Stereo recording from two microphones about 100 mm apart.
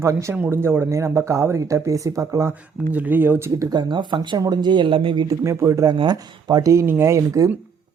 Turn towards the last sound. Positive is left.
turn(degrees=-35)  # may be behind; listen again after turning